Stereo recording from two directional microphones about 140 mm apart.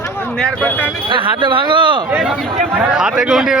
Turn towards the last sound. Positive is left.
turn(degrees=-5)  # may be behind; listen again after turning